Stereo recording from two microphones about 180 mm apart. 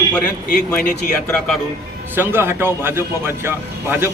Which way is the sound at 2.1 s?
10° right (ahead or behind).